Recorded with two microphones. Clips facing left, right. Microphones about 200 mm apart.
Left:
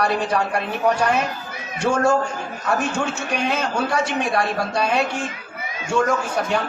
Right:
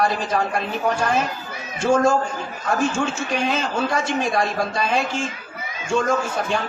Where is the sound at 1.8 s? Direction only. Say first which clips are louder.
Right 1 dB; 65° left (ahead or behind).